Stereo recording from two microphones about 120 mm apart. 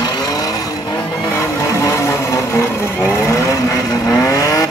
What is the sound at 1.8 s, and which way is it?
Vehicle, 25° left (ahead or behind).